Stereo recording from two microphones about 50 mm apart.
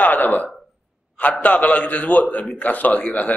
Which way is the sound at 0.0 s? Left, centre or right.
Left.